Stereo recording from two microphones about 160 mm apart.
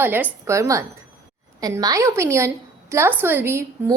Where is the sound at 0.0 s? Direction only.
15° right (ahead or behind).